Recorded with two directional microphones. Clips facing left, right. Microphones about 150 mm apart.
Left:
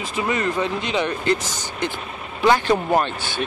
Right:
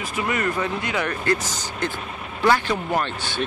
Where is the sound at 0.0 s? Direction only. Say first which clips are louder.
Left 2 dB; 25° left (ahead or behind).